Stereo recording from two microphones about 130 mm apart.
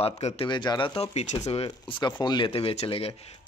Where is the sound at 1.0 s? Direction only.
55° left (ahead or behind).